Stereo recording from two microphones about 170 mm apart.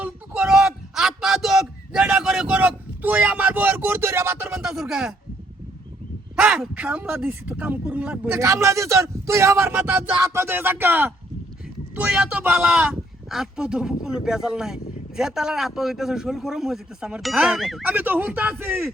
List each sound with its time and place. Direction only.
0.0 s a sound: 5° right (ahead or behind)
6.3 s speech: 5° right (ahead or behind)
8.4 s speech: 15° right (ahead or behind); by 17.8 s centre (ahead or behind)
17.8 s speech: 10° right (ahead or behind)